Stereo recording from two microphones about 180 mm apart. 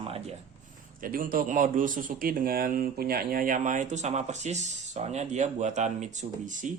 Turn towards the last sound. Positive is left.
turn(degrees=-45)  # may be behind; listen again after turning